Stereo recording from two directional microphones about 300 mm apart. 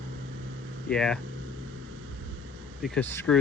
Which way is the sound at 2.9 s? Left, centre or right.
Centre.